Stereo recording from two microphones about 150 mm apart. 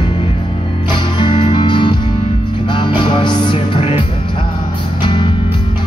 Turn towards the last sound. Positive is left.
turn(degrees=35)  # may be behind; listen again after turning